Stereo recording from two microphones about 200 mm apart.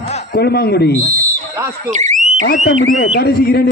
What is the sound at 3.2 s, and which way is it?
Speech, 50° left (ahead or behind).